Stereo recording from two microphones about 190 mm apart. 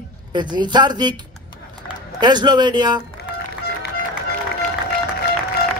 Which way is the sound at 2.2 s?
25° right (ahead or behind).